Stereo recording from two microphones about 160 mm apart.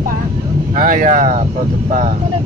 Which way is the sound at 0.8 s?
60° right (ahead or behind).